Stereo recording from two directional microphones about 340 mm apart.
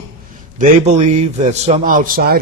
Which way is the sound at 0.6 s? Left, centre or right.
Centre.